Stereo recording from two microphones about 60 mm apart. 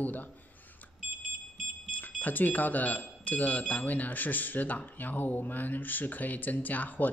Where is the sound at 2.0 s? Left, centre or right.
Left.